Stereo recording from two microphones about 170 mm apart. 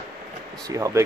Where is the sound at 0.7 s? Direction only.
20° right (ahead or behind).